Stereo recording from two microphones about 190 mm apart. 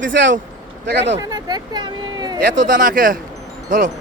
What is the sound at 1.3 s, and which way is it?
Speech, 20° right (ahead or behind).